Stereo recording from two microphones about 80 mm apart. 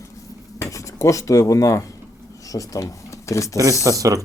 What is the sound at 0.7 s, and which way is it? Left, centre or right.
Speech, left.